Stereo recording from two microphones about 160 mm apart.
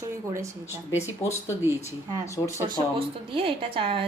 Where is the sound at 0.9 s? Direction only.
20° left (ahead or behind).